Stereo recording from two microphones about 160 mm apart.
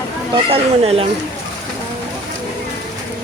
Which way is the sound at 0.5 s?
35° right (ahead or behind).